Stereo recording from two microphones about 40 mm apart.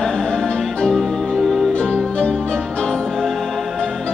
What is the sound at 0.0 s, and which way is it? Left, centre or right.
Music, centre.